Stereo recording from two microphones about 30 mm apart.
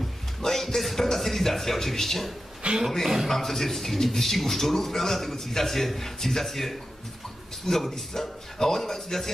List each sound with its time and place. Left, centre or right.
0.5 s music: centre
1.1 s a man's voice: centre
2.6 s speech: right
3.3 s a man's voice: centre